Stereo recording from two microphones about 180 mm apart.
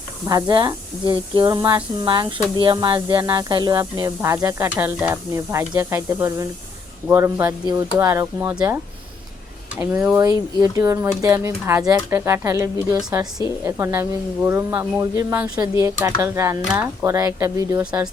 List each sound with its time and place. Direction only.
0.3 s speech: 20° right (ahead or behind)